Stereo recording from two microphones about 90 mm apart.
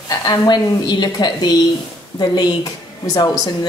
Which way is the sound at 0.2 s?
50° left (ahead or behind).